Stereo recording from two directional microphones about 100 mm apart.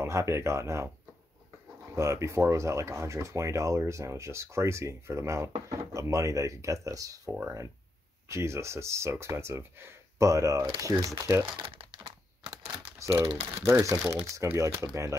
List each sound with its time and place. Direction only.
0.0 s speech: 25° right (ahead or behind)
2.0 s speech: 30° right (ahead or behind)
11.6 s crumpling: 65° right (ahead or behind)
13.5 s speech: 30° right (ahead or behind)